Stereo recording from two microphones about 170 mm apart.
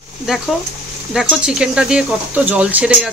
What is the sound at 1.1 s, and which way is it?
Speech, 5° right (ahead or behind).